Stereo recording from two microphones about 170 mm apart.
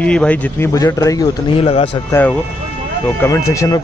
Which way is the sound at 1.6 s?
35° left (ahead or behind).